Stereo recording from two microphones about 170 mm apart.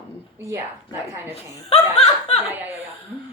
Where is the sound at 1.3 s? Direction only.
35° left (ahead or behind).